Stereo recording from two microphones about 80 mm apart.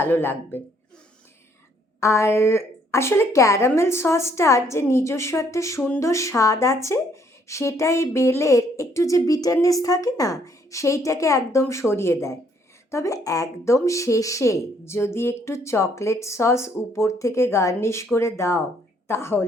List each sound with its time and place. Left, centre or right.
0.0 s speech: left
2.0 s a woman's voice: left